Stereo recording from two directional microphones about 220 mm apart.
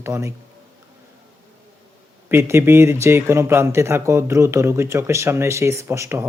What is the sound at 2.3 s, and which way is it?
Speech, 10° right (ahead or behind).